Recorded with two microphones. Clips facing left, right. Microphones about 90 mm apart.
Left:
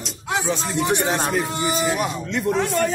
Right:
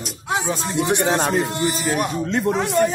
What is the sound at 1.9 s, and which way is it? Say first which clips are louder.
Speech: right 2 dB; 40° right (ahead or behind).